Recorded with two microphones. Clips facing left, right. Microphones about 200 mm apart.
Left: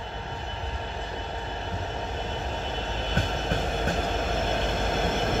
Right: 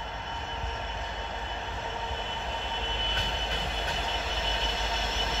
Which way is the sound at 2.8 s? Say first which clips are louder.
Left 6 dB; 40° left (ahead or behind).